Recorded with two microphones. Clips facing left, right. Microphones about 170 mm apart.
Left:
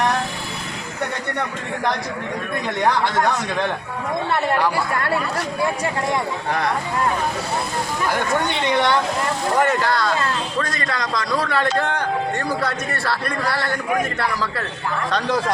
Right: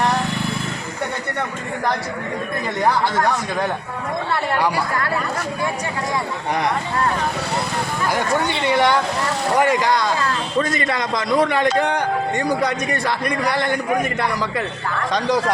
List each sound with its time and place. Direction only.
8.6 s a man's voice: 10° right (ahead or behind)